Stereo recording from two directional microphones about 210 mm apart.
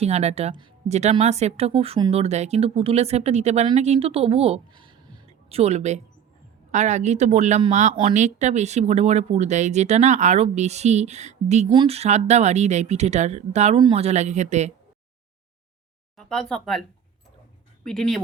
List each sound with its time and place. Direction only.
0.0 s speech: 30° right (ahead or behind)
16.1 s speech: centre (ahead or behind)
17.8 s speech: centre (ahead or behind)